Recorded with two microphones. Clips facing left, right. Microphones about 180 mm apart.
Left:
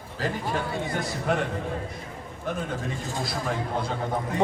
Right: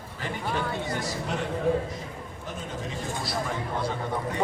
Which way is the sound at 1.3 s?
55° left (ahead or behind).